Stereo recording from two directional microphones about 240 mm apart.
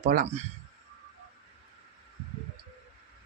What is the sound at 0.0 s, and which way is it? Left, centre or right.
Speech, right.